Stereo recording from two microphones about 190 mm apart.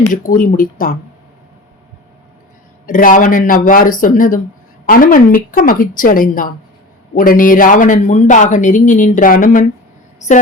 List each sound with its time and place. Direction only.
0.1 s speech: 45° left (ahead or behind)
2.8 s speech: 45° left (ahead or behind)